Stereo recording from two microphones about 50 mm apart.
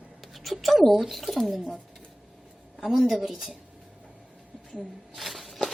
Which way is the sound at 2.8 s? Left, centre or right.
Centre.